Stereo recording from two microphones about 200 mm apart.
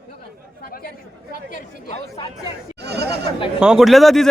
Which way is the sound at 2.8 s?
55° right (ahead or behind).